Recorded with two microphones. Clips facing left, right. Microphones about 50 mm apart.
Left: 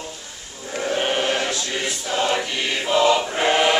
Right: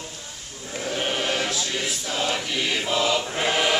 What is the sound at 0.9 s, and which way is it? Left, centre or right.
Sheep, centre.